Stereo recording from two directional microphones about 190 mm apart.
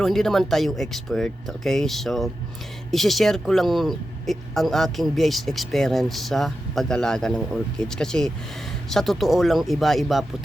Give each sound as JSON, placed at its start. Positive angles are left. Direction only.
{"t": 0.0, "sound": "speech", "side_deg": 0}